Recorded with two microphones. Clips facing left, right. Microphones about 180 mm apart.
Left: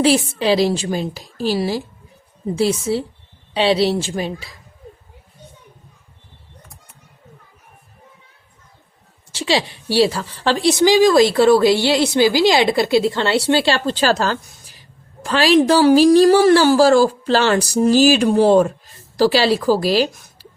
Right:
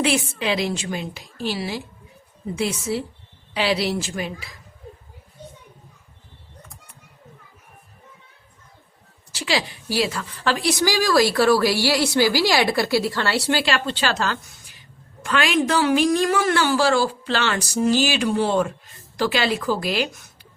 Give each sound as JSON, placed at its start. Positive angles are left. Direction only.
{"t": 0.0, "sound": "a woman's voice", "side_deg": 35}
{"t": 9.3, "sound": "a woman's voice", "side_deg": 25}